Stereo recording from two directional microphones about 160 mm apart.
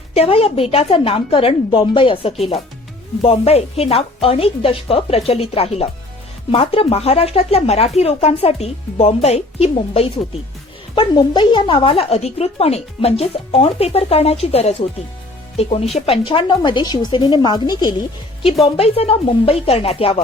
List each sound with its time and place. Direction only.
0.1 s speech: 40° left (ahead or behind)
18.6 s speech: 40° left (ahead or behind)